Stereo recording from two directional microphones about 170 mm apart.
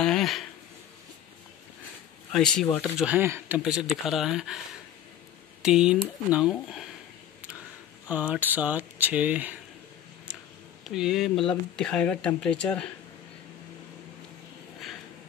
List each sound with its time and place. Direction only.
0.0 s a sound: centre (ahead or behind)
2.3 s speech: 5° left (ahead or behind)
5.6 s speech: 5° right (ahead or behind)
8.1 s speech: 10° right (ahead or behind)
10.8 s speech: centre (ahead or behind)